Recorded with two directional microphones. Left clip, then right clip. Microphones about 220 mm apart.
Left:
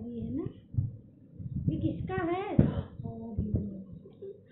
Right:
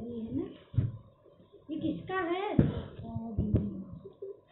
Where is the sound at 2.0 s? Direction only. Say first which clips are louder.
Even; 15° left (ahead or behind).